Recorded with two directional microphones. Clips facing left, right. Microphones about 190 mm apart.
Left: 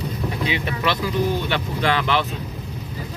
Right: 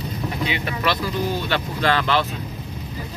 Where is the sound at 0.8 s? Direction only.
20° left (ahead or behind).